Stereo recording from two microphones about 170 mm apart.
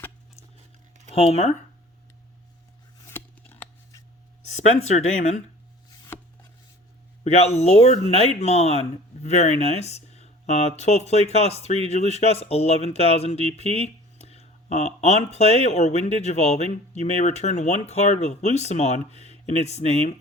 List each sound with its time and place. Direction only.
1.1 s speech: 35° left (ahead or behind)
3.0 s scissors: 15° left (ahead or behind)
4.5 s speech: 45° left (ahead or behind)
6.1 s a sound: 10° left (ahead or behind)
7.3 s speech: 40° left (ahead or behind)